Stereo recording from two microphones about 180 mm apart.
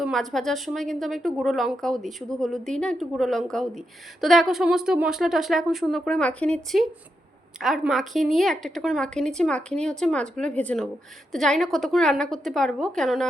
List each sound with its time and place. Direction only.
0.0 s a woman's voice: centre (ahead or behind)